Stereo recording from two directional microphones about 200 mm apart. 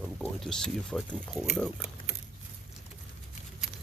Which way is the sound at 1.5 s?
Centre (ahead or behind).